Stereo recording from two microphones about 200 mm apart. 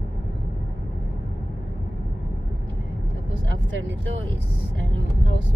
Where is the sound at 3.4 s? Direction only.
65° right (ahead or behind).